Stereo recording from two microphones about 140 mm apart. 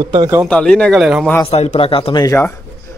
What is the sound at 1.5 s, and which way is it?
Speech, 50° left (ahead or behind).